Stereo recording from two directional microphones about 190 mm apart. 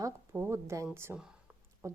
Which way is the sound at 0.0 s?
10° right (ahead or behind).